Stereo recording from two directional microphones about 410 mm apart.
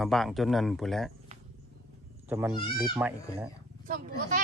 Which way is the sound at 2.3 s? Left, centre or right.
Centre.